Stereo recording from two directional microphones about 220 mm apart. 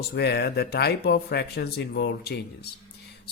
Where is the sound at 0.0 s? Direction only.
45° left (ahead or behind).